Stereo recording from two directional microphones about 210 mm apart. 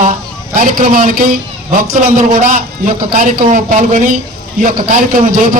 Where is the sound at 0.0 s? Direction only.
40° right (ahead or behind).